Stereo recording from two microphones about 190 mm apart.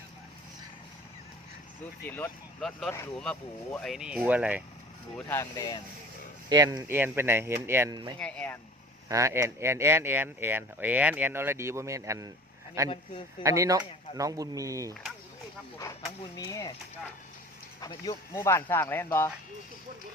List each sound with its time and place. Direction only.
2.0 s speech: 10° left (ahead or behind); by 4.6 s 10° right (ahead or behind)
5.1 s speech: 10° left (ahead or behind)
6.5 s speech: 20° right (ahead or behind)
8.2 s speech: 5° left (ahead or behind)
9.0 s speech: 15° right (ahead or behind)
16.3 s speech: 20° left (ahead or behind)
17.7 s speech: 20° left (ahead or behind)